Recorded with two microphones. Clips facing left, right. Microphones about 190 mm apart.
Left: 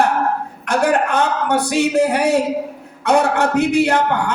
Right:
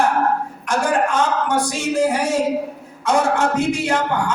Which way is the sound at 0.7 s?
60° left (ahead or behind).